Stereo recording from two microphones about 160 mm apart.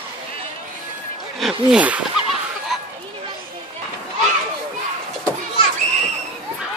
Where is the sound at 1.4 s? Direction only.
5° right (ahead or behind).